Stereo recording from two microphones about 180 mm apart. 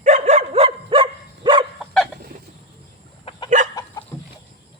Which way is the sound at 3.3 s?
30° left (ahead or behind).